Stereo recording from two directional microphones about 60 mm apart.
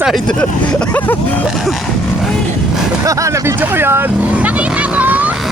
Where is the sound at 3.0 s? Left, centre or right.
Right.